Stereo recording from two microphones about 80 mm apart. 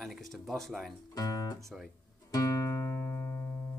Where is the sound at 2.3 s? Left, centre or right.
Left.